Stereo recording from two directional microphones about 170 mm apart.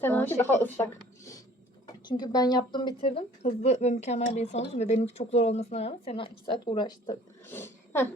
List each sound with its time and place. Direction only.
0.0 s a woman's voice: 10° left (ahead or behind)
2.0 s a woman's voice: 25° left (ahead or behind)
7.4 s speech: 15° left (ahead or behind)